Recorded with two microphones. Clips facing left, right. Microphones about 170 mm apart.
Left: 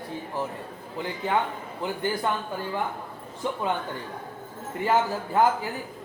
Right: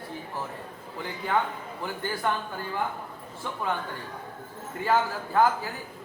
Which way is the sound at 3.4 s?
20° left (ahead or behind).